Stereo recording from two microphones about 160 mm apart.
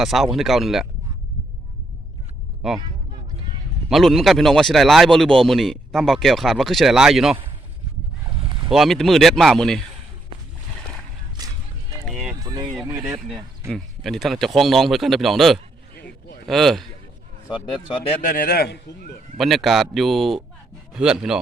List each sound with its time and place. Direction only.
0.0 s speech: centre (ahead or behind)
2.6 s speech: centre (ahead or behind)
3.8 s speech: centre (ahead or behind)
8.3 s a sound: 30° right (ahead or behind)
8.7 s speech: centre (ahead or behind)
12.1 s run: 25° right (ahead or behind)
12.9 s speech: 20° right (ahead or behind)
13.1 s speech: centre (ahead or behind)
17.9 s speech: 35° left (ahead or behind)
18.2 s a man's voice: 60° left (ahead or behind); by 18.8 s 80° left
19.4 s speech: centre (ahead or behind)